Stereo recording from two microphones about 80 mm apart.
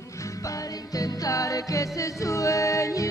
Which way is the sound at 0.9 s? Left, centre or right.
Left.